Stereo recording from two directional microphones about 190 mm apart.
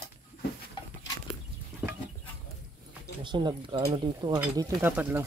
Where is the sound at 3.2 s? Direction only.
25° right (ahead or behind).